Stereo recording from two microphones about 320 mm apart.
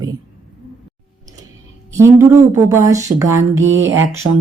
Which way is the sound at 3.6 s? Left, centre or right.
Right.